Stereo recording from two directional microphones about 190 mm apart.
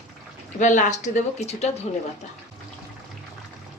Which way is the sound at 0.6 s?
40° left (ahead or behind).